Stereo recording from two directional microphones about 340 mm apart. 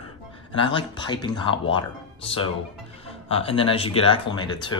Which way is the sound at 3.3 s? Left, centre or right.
Centre.